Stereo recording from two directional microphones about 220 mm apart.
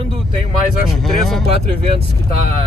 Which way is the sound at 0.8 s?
Centre (ahead or behind).